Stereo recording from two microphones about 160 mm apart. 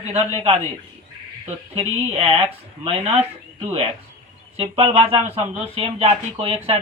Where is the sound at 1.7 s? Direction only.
40° right (ahead or behind).